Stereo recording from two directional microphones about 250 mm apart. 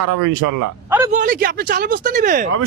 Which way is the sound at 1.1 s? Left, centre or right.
Right.